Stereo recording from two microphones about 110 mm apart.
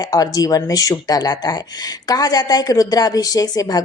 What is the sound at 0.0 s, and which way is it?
Speech, 35° left (ahead or behind).